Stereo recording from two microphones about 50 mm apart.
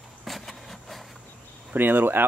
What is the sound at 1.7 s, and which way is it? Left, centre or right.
Speech, right.